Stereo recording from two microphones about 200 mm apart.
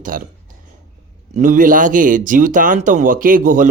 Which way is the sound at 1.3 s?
40° right (ahead or behind).